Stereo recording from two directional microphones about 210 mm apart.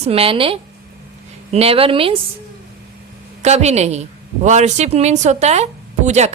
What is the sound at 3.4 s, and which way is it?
A woman's voice, 30° right (ahead or behind).